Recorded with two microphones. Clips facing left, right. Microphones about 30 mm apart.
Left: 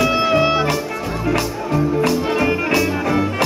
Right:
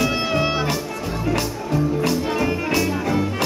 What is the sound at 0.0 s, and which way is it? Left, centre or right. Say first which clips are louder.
Music: left 5 dB; centre.